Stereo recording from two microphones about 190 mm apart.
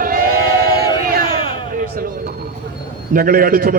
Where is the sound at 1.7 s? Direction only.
50° right (ahead or behind).